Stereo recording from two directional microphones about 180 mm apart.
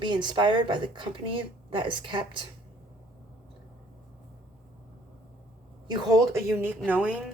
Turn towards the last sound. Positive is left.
turn(degrees=-10)  # may be behind; listen again after turning